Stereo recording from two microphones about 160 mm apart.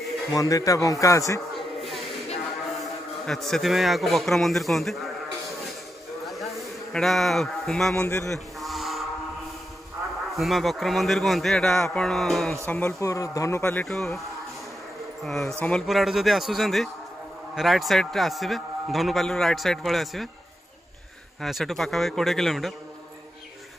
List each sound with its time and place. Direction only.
0.3 s a man's voice: 20° left (ahead or behind)
3.3 s a man's voice: centre (ahead or behind)
6.2 s a sound: centre (ahead or behind)
10.3 s a man's voice: centre (ahead or behind)
12.6 s speech: 15° left (ahead or behind)
13.8 s a man's voice: 5° left (ahead or behind)
15.2 s a man's voice: 5° left (ahead or behind)
21.4 s a man's voice: centre (ahead or behind)